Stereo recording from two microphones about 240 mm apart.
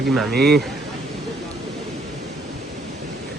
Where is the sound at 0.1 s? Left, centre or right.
Centre.